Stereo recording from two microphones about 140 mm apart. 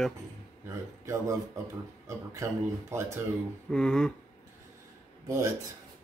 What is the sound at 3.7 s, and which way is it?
Speech, 5° left (ahead or behind).